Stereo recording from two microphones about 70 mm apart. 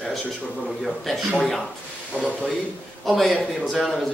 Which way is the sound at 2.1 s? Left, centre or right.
Right.